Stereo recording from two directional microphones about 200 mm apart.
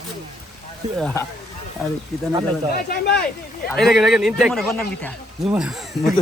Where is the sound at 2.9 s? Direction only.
55° left (ahead or behind).